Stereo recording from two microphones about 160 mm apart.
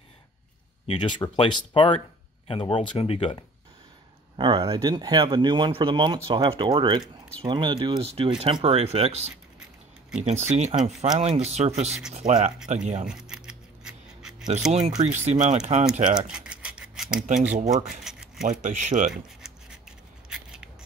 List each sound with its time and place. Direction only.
0.8 s speech: 30° left (ahead or behind)
4.4 s speech: 25° right (ahead or behind)
7.0 s speech: 10° left (ahead or behind)
7.4 s speech: 30° right (ahead or behind); by 13.0 s 50° right (ahead or behind)
13.0 s scissors: 5° right (ahead or behind)
14.6 s speech: 5° right (ahead or behind)
15.0 s speech: 45° right (ahead or behind)
16.2 s rub: 5° right (ahead or behind)
17.6 s speech: 50° right (ahead or behind)
18.0 s a sound: centre (ahead or behind)
18.5 s speech: 50° right (ahead or behind)
19.4 s a sound: 5° right (ahead or behind)